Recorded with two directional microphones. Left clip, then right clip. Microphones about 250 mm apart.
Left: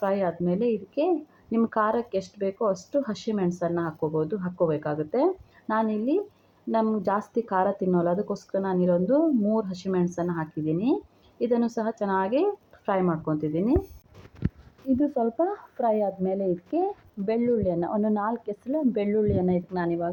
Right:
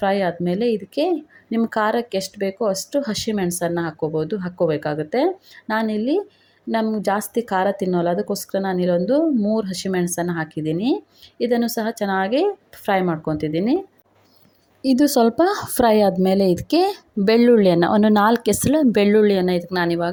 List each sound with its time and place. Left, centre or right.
0.0 s speech: right
14.8 s speech: right